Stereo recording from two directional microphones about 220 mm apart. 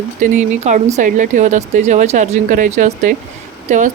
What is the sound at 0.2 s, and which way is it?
A woman's voice, 35° right (ahead or behind).